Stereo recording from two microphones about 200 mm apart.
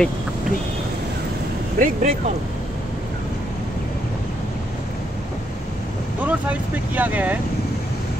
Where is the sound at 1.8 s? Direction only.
40° right (ahead or behind).